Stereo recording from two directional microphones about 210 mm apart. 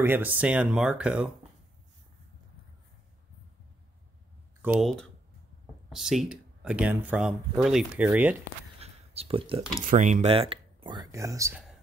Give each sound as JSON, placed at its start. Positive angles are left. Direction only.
{"t": 0.0, "sound": "speech", "side_deg": -10}
{"t": 4.7, "sound": "speech", "side_deg": 0}
{"t": 8.7, "sound": "a sound", "side_deg": -30}
{"t": 9.8, "sound": "speech", "side_deg": -35}